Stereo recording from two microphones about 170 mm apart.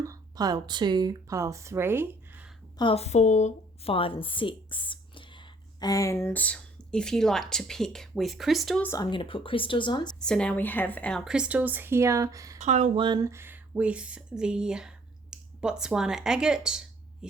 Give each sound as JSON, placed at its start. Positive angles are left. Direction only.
{"t": 0.0, "sound": "speech", "side_deg": -20}
{"t": 2.7, "sound": "a woman's voice", "side_deg": 35}
{"t": 8.9, "sound": "speech", "side_deg": 25}
{"t": 10.2, "sound": "a woman's voice", "side_deg": 5}
{"t": 11.3, "sound": "speech", "side_deg": -5}
{"t": 12.5, "sound": "speech", "side_deg": -45}
{"t": 13.0, "sound": "speech", "side_deg": -25}